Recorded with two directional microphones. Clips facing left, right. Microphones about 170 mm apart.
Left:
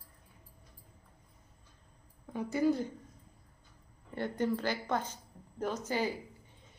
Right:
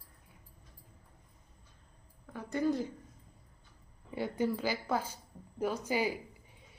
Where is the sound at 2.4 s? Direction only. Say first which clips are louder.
Left 2 dB; 5° left (ahead or behind).